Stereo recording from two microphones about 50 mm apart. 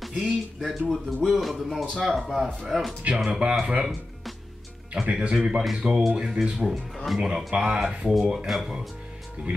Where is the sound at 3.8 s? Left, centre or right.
Centre.